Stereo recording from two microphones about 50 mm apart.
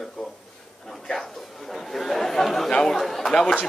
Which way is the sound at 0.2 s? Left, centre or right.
Centre.